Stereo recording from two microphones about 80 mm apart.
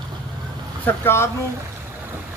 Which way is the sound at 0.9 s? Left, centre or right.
Left.